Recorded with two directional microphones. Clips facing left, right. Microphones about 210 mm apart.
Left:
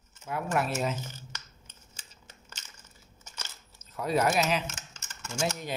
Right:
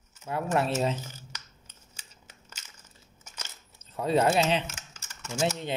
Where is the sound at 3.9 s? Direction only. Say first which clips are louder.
Right 3 dB; 30° right (ahead or behind).